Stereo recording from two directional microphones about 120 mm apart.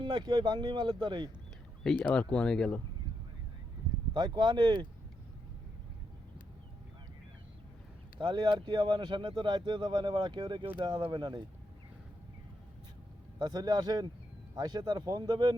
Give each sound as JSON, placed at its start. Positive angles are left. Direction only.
{"t": 0.0, "sound": "speech", "side_deg": -40}
{"t": 1.8, "sound": "speech", "side_deg": 5}
{"t": 4.1, "sound": "speech", "side_deg": -40}
{"t": 8.2, "sound": "speech", "side_deg": -40}
{"t": 13.4, "sound": "speech", "side_deg": -35}